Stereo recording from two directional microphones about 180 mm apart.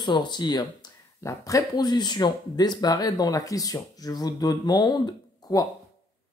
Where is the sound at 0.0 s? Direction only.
25° left (ahead or behind).